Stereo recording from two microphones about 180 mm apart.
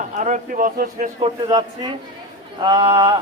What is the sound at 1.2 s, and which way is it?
A man's voice, 25° right (ahead or behind).